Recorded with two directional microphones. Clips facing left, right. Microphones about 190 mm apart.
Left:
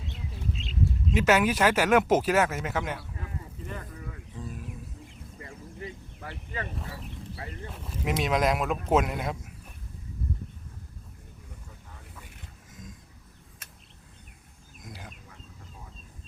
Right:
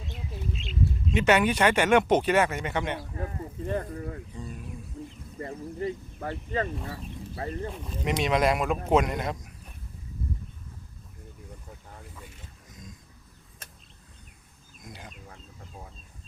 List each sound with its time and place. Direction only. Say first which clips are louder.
0.6 s bird: even; 35° left (ahead or behind)
1.1 s speech: right 1 dB; centre (ahead or behind)
3.0 s a sound: right 6 dB; 40° right (ahead or behind)
4.4 s a sound: even; 5° left (ahead or behind)
5.0 s bird: right 9 dB; 55° right (ahead or behind)
5.4 s a sound: right 9 dB; 40° right (ahead or behind)
7.3 s speech: right 11 dB; 35° right (ahead or behind)
7.7 s speech: right 1 dB; 5° left (ahead or behind)
14.8 s chicken: even; centre (ahead or behind)